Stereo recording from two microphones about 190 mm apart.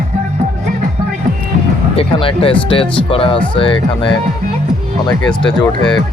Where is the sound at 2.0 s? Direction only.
30° left (ahead or behind).